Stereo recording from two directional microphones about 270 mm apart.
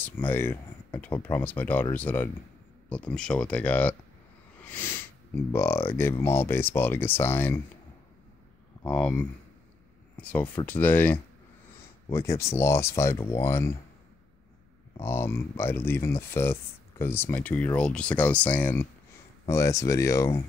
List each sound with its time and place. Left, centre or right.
0.0 s speech: centre
8.8 s speech: centre
15.0 s speech: centre